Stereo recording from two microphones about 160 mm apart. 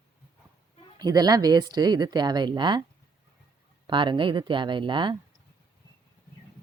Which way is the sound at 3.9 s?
30° right (ahead or behind).